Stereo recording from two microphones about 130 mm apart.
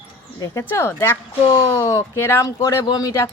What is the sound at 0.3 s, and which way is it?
Speech, 25° left (ahead or behind).